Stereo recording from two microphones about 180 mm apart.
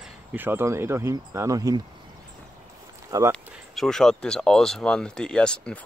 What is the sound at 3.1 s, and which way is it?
Speech, 20° right (ahead or behind).